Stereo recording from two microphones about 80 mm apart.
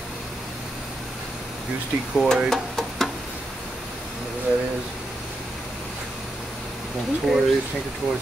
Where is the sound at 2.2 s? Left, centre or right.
Centre.